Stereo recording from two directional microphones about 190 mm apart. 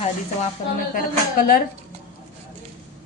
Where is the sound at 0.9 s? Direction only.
50° left (ahead or behind).